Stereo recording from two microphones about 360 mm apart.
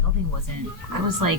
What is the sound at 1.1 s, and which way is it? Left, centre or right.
Speech, right.